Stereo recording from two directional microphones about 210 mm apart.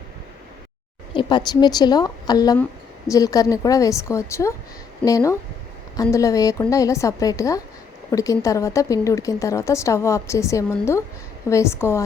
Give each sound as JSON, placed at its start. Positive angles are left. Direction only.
{"t": 1.1, "sound": "a woman's voice", "side_deg": 20}